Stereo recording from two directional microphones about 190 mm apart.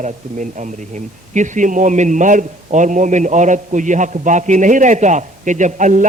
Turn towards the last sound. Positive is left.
turn(degrees=-40)  # may be behind; listen again after turning